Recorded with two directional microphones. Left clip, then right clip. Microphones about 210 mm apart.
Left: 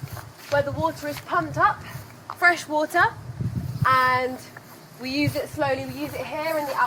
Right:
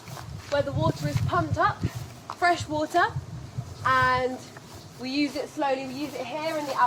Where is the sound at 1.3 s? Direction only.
30° left (ahead or behind).